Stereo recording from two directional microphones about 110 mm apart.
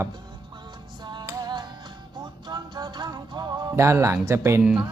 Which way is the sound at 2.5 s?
40° right (ahead or behind).